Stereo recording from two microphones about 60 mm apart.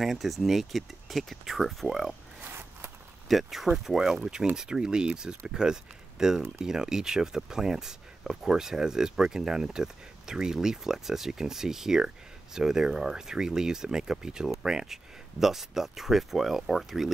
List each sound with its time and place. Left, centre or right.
0.0 s speech: centre
2.4 s a sound: right
3.3 s speech: centre